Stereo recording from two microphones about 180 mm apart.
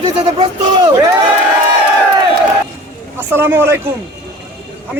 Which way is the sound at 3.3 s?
15° right (ahead or behind).